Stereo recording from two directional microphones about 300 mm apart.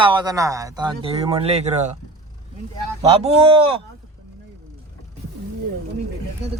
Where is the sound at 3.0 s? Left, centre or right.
Centre.